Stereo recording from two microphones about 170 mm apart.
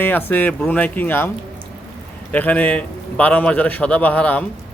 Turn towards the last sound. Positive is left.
turn(degrees=10)  # may be behind; listen again after turning